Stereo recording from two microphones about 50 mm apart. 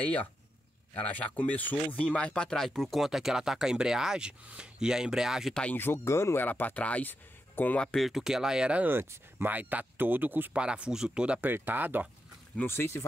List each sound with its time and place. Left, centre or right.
0.0 s speech: left
2.0 s speech: left
2.6 s speech: centre
3.0 s speech: centre
6.0 s speech: left
6.3 s speech: left
8.0 s speech: centre
9.5 s speech: right
10.5 s speech: right
11.4 s speech: right
12.6 s speech: left